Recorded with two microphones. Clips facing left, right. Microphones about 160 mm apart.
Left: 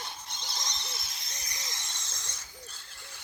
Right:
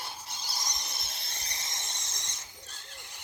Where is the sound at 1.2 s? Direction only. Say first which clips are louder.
Right 1 dB; 30° right (ahead or behind).